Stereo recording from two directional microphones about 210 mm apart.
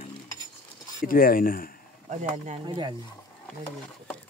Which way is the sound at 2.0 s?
30° right (ahead or behind).